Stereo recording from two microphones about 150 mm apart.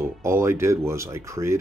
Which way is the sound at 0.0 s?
15° right (ahead or behind).